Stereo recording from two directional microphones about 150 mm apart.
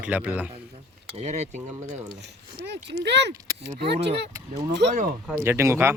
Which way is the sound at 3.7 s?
90° right.